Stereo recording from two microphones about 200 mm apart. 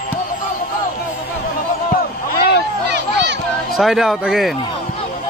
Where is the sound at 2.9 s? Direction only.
55° right (ahead or behind).